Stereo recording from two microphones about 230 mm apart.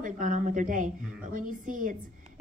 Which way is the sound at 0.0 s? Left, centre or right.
Right.